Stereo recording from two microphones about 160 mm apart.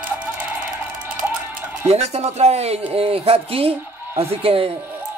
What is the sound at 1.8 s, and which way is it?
Speech, 40° right (ahead or behind).